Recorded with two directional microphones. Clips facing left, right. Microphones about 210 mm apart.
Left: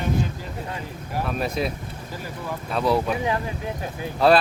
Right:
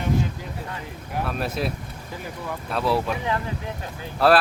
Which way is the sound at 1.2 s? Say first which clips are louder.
Left 2 dB; centre (ahead or behind).